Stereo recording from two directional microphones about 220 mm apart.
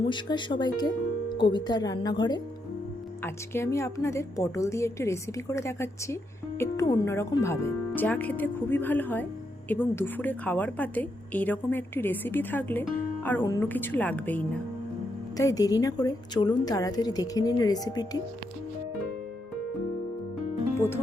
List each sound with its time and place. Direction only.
0.1 s a woman's voice: 20° left (ahead or behind)
20.7 s speech: 10° left (ahead or behind)